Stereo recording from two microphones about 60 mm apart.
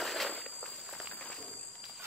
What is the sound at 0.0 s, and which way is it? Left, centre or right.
Walk, centre.